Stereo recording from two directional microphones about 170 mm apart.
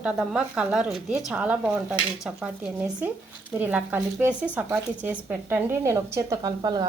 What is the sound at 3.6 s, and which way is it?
A woman's voice, 10° right (ahead or behind).